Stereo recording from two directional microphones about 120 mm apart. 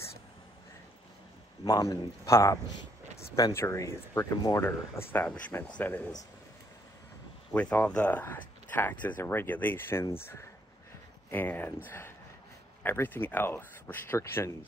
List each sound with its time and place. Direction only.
1.6 s speech: 30° left (ahead or behind); by 6.0 s 10° left (ahead or behind)
7.5 s speech: 15° left (ahead or behind)